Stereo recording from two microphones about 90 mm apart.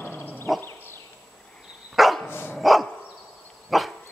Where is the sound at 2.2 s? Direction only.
25° left (ahead or behind).